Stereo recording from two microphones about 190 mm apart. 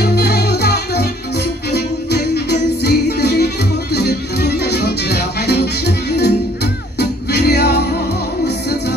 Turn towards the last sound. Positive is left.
turn(degrees=60)  # may be behind; listen again after turning